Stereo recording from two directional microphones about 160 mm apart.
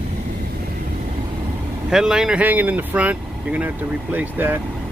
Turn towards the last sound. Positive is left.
turn(degrees=-10)  # may be behind; listen again after turning